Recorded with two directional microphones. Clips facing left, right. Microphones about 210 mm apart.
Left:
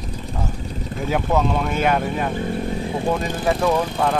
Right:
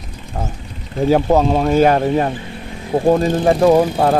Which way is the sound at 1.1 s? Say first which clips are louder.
Right 7 dB; 35° right (ahead or behind).